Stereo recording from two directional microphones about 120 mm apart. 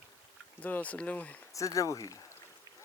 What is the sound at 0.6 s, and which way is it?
Speech, 10° left (ahead or behind).